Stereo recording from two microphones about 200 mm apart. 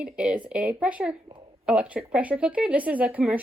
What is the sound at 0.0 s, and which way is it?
A woman's voice, 5° right (ahead or behind).